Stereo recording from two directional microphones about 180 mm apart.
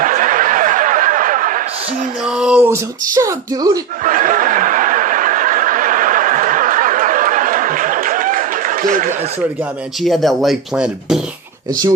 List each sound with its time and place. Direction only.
0.0 s snicker: 50° right (ahead or behind)
2.2 s speech: 5° right (ahead or behind)
4.0 s snicker: 50° right (ahead or behind)
10.0 s speech: centre (ahead or behind)